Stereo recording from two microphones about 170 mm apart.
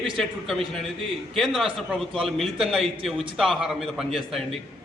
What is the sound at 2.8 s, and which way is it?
Speech, 35° right (ahead or behind).